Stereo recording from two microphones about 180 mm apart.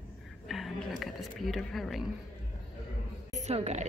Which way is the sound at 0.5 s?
Centre (ahead or behind).